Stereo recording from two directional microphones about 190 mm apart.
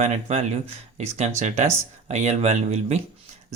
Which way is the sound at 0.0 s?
35° right (ahead or behind).